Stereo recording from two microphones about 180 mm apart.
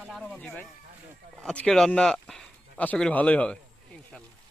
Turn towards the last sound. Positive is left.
turn(degrees=5)  # may be behind; listen again after turning